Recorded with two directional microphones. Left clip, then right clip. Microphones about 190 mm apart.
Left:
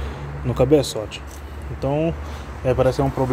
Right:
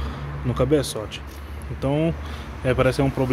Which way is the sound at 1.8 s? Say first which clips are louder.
Left 2 dB; 20° right (ahead or behind).